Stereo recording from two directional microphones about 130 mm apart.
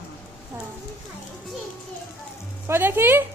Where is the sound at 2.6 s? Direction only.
15° right (ahead or behind).